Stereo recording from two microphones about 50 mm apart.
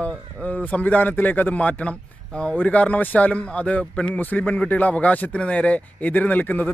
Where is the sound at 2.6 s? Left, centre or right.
Left.